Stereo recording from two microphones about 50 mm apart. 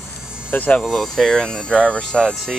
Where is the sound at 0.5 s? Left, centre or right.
Left.